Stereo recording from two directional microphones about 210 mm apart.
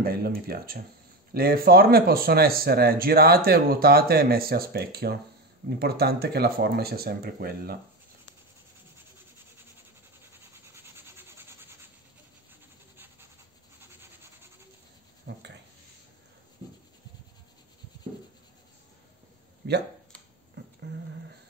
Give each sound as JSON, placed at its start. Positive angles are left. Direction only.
{"t": 0.0, "sound": "speech", "side_deg": -45}
{"t": 10.7, "sound": "toothbrush", "side_deg": -10}
{"t": 15.3, "sound": "a sound", "side_deg": -50}
{"t": 19.6, "sound": "speech", "side_deg": -50}